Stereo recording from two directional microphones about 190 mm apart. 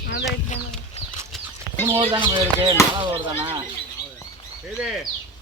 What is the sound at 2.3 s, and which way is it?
Speech, 20° right (ahead or behind).